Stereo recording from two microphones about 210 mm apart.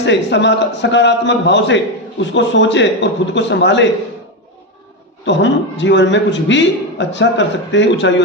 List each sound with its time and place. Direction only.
0.0 s a man's voice: 55° left (ahead or behind)
5.2 s a man's voice: 60° left (ahead or behind)